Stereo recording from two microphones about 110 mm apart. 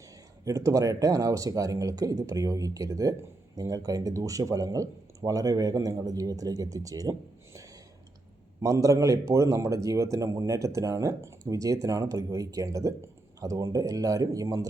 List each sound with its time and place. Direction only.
0.4 s speech: 30° right (ahead or behind)